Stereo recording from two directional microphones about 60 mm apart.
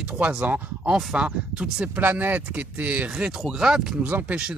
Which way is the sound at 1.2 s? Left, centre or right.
Centre.